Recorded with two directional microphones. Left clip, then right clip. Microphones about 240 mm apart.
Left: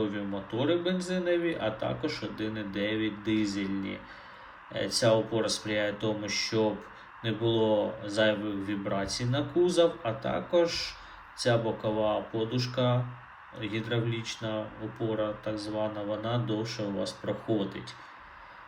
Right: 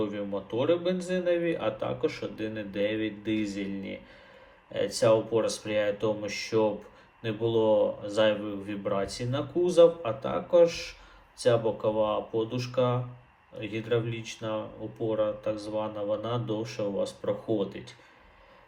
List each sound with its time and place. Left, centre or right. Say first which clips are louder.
0.0 s a man's voice: right 1 dB; centre